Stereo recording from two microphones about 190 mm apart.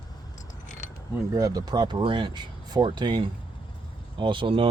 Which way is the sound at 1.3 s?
20° right (ahead or behind).